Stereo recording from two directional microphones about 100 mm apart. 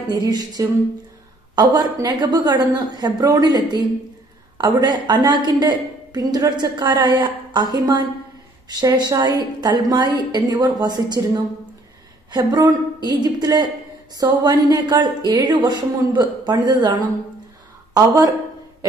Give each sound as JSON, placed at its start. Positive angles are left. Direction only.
{"t": 0.1, "sound": "a woman's voice", "side_deg": -40}